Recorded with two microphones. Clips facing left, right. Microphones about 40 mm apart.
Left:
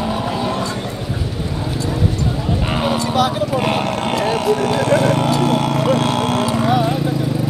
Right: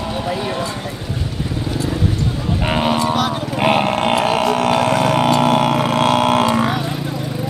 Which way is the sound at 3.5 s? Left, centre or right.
Right.